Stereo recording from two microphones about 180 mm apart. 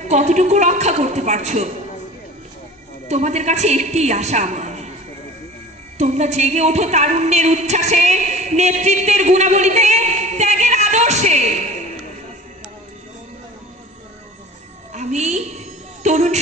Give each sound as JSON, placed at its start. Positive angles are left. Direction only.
{"t": 0.1, "sound": "a woman's voice", "side_deg": -40}
{"t": 3.1, "sound": "a woman's voice", "side_deg": -40}
{"t": 5.9, "sound": "speech", "side_deg": -40}
{"t": 14.9, "sound": "a sound", "side_deg": -40}